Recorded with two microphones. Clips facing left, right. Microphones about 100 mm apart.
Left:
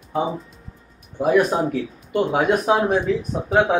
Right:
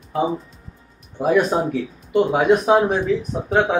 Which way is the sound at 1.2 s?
Centre (ahead or behind).